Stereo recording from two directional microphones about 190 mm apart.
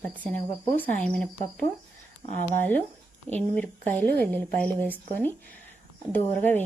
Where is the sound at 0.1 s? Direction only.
5° left (ahead or behind).